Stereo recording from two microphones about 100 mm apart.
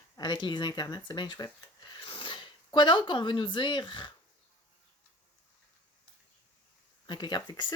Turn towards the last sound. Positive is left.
turn(degrees=50)  # may be behind; listen again after turning